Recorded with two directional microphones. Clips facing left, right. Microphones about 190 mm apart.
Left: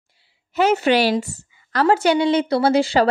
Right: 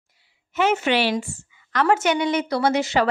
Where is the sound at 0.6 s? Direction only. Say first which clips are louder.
Left 4 dB; 35° left (ahead or behind).